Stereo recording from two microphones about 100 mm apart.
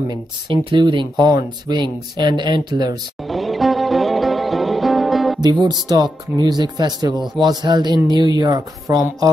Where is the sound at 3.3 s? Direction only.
Centre (ahead or behind).